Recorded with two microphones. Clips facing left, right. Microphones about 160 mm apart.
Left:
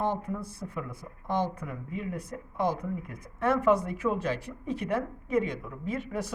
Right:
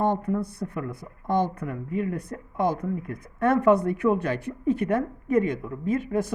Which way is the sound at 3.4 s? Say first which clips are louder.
Right 5 dB; 55° right (ahead or behind).